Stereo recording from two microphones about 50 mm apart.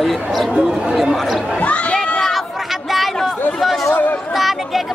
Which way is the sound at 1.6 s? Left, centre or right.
Left.